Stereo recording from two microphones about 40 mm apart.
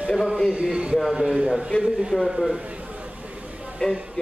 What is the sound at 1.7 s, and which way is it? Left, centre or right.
Speech, left.